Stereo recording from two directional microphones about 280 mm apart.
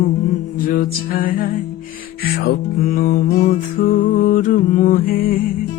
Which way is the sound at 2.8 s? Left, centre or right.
Left.